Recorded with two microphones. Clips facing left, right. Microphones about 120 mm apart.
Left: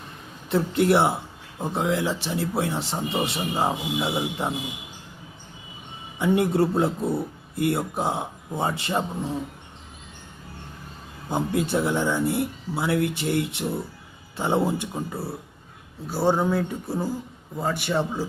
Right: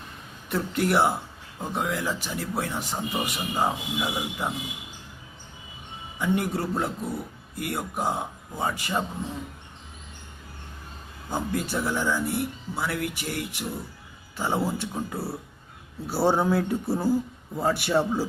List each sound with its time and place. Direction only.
0.5 s speech: 25° left (ahead or behind)
6.1 s speech: 25° left (ahead or behind)
11.3 s speech: 20° left (ahead or behind)
14.9 s a man's voice: centre (ahead or behind)